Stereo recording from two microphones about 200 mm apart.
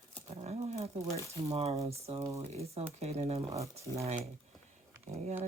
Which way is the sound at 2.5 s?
30° right (ahead or behind).